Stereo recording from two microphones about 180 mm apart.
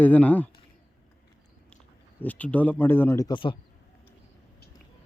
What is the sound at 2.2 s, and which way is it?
A man's voice, 10° left (ahead or behind).